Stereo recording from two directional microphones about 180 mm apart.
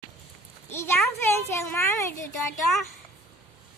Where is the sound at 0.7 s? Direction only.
15° left (ahead or behind).